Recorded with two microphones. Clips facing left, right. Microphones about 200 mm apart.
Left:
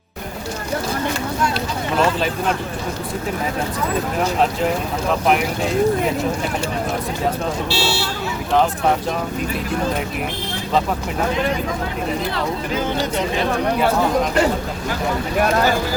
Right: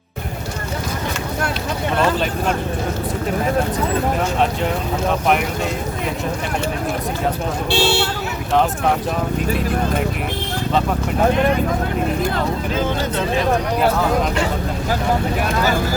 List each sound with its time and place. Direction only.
7.7 s speech: 55° right (ahead or behind)
11.3 s speech: 55° right (ahead or behind)